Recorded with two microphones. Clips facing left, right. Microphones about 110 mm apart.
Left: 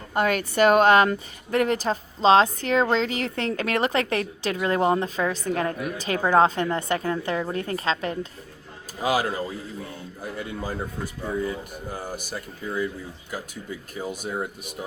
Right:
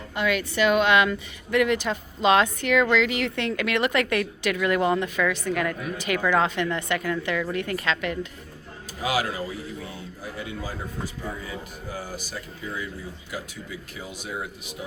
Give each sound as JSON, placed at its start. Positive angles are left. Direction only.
{"t": 0.1, "sound": "a woman's voice", "side_deg": 45}
{"t": 9.0, "sound": "speech", "side_deg": 45}
{"t": 10.4, "sound": "speech", "side_deg": 50}
{"t": 13.9, "sound": "speech", "side_deg": 45}